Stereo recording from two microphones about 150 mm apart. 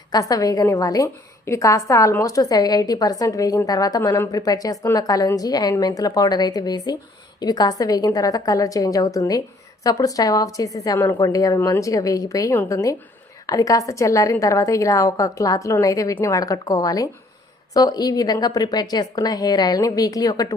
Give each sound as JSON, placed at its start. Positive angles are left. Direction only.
{"t": 0.1, "sound": "a woman's voice", "side_deg": 25}